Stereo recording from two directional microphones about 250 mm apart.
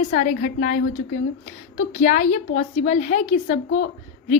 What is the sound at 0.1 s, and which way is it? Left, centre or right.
A woman's voice, left.